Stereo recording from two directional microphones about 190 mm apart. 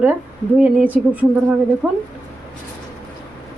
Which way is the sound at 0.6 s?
5° right (ahead or behind).